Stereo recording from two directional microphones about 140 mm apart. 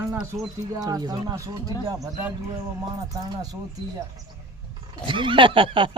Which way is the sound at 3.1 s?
25° right (ahead or behind).